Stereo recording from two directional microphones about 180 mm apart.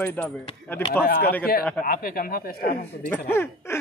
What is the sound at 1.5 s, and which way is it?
A man's voice, 55° left (ahead or behind).